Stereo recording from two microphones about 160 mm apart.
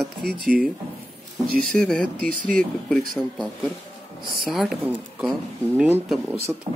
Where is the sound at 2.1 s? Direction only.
60° right (ahead or behind).